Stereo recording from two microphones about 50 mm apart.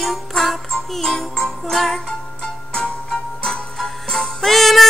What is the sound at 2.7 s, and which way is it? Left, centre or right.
Music, centre.